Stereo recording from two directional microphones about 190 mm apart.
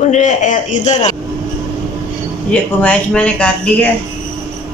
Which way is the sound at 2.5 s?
5° left (ahead or behind).